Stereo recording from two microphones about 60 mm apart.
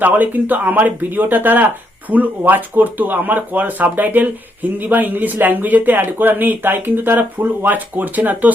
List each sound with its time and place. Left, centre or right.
0.0 s speech: right